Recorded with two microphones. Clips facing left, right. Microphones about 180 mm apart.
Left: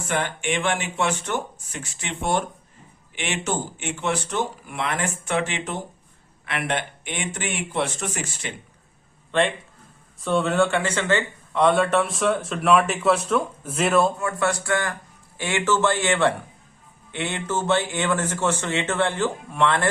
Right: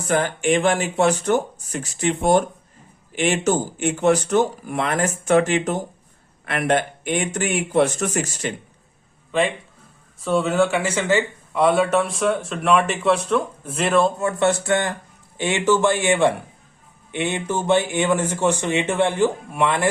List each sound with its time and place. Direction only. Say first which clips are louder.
0.1 s speech: right 6 dB; 40° right (ahead or behind)
9.3 s speech: right 1 dB; 5° right (ahead or behind)
14.2 s a man's voice: right 5 dB; 25° right (ahead or behind)